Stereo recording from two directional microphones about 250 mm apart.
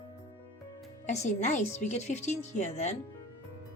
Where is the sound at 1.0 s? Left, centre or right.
Left.